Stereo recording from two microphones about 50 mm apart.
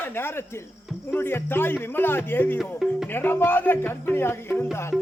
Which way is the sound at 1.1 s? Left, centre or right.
Left.